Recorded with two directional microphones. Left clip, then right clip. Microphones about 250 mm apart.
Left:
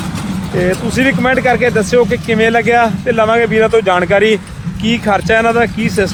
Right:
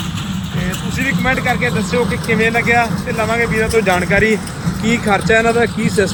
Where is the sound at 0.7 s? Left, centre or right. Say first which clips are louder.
Left 5 dB; left.